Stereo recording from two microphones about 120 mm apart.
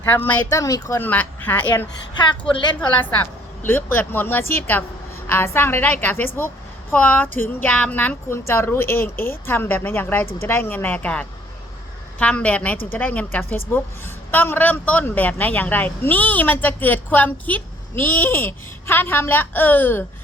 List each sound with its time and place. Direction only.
0.0 s a woman's voice: 15° left (ahead or behind)
0.5 s speech: 25° left (ahead or behind)
1.0 s a woman's voice: 15° left (ahead or behind)
2.4 s a woman's voice: 40° left (ahead or behind)
3.7 s a woman's voice: 15° left (ahead or behind)